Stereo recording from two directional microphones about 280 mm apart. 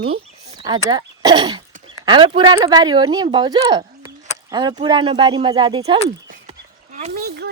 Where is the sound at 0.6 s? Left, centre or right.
Centre.